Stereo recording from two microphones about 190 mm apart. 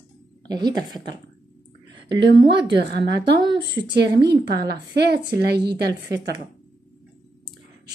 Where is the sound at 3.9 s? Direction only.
60° right (ahead or behind).